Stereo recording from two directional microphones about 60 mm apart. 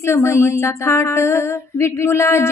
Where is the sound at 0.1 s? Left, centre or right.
Left.